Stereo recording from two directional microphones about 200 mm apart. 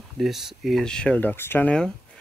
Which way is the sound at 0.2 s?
Centre (ahead or behind).